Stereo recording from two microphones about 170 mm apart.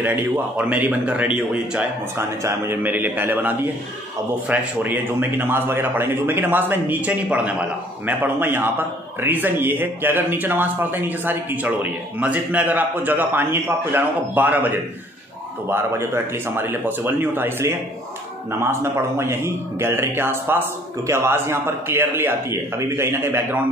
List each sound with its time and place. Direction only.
0.0 s a man's voice: 10° right (ahead or behind)